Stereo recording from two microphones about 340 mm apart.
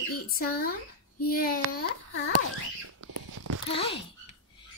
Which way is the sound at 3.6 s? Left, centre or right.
Centre.